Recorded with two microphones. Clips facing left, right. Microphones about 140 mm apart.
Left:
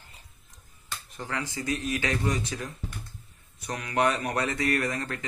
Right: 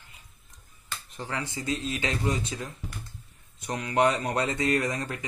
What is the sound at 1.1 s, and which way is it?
Speech, 20° right (ahead or behind).